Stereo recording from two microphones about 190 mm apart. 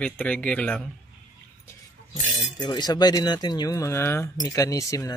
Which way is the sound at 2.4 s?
20° left (ahead or behind).